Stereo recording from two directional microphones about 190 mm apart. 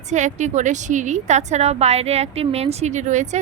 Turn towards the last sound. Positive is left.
turn(degrees=-40)  # may be behind; listen again after turning